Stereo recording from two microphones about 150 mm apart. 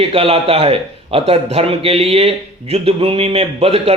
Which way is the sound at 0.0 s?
40° right (ahead or behind).